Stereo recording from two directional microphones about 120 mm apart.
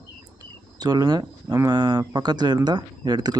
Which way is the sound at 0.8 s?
35° right (ahead or behind).